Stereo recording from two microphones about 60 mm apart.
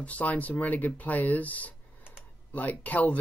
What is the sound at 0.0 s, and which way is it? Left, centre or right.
Speech, left.